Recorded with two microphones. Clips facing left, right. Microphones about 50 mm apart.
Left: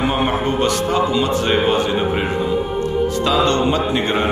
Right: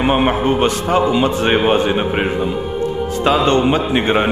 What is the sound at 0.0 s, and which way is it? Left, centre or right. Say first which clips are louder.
A man's voice: right 3 dB; right.